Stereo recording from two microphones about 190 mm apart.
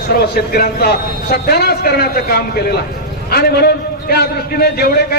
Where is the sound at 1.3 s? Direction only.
55° left (ahead or behind).